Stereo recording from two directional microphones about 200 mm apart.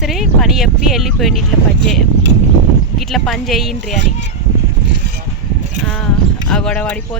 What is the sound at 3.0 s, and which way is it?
Speech, centre (ahead or behind).